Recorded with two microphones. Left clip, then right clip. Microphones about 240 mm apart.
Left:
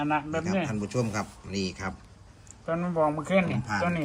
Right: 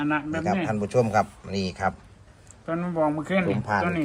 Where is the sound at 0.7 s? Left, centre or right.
Centre.